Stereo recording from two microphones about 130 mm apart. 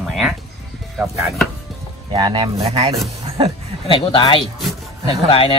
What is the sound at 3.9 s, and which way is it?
Speech, 40° left (ahead or behind).